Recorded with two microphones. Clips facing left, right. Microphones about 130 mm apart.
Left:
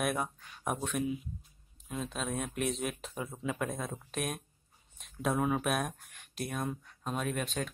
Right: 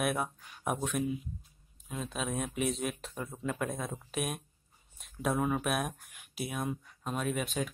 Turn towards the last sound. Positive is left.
turn(degrees=-5)  # may be behind; listen again after turning